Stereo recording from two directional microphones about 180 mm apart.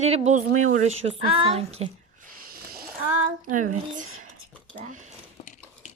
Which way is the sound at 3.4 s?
45° right (ahead or behind).